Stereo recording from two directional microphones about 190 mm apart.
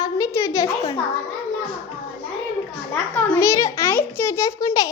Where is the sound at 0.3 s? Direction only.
15° left (ahead or behind).